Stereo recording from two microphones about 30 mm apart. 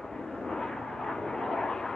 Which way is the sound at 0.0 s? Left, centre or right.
Left.